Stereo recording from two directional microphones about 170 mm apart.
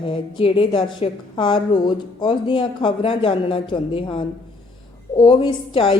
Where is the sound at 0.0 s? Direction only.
30° left (ahead or behind).